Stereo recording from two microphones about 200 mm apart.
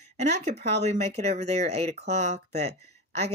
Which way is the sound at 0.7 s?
35° right (ahead or behind).